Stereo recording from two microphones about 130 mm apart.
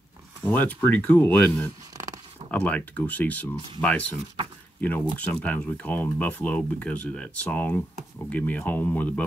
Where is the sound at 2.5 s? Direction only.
10° left (ahead or behind).